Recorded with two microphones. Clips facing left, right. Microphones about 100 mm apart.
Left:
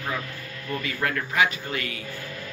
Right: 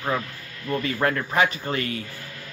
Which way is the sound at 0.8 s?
35° right (ahead or behind).